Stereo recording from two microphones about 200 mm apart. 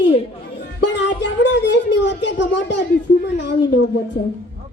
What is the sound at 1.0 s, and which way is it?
Speech, 60° left (ahead or behind).